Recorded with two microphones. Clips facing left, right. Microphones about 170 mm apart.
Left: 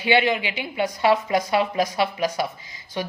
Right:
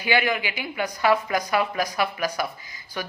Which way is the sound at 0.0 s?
25° left (ahead or behind).